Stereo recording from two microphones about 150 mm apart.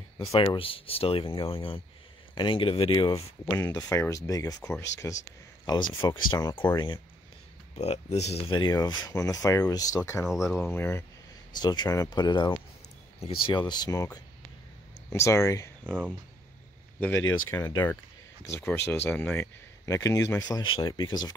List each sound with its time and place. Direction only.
0.5 s speech: 35° left (ahead or behind); by 5.1 s 20° left (ahead or behind)
5.7 s speech: 30° left (ahead or behind)
7.7 s speech: 45° left (ahead or behind); by 10.2 s 20° left (ahead or behind)
10.2 s speech: 5° right (ahead or behind)
10.5 s speech: 15° left (ahead or behind)
11.5 s speech: 30° left (ahead or behind)
17.0 s speech: 15° left (ahead or behind)